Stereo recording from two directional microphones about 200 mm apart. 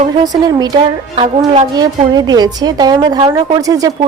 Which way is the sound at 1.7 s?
20° right (ahead or behind).